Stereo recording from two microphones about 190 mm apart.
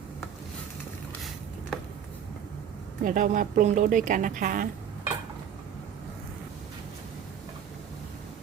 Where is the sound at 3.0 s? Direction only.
45° right (ahead or behind).